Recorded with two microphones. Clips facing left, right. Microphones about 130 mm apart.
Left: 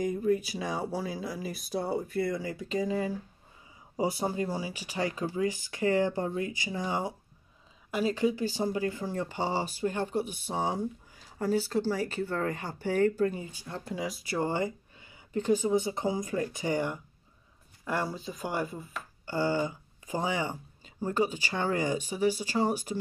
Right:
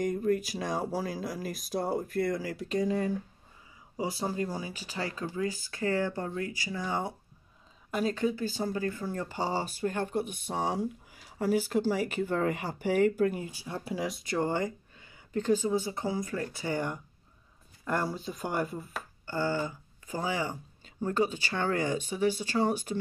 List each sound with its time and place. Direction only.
0.0 s speech: centre (ahead or behind)
3.9 s speech: 25° left (ahead or behind)
4.5 s speech: 10° left (ahead or behind)
7.9 s speech: 5° left (ahead or behind)
11.3 s speech: 10° right (ahead or behind)
19.2 s speech: 15° left (ahead or behind)